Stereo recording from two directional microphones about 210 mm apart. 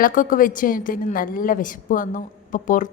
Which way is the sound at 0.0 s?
40° left (ahead or behind).